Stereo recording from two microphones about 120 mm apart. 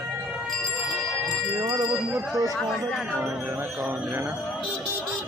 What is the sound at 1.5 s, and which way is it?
Speech, 30° right (ahead or behind).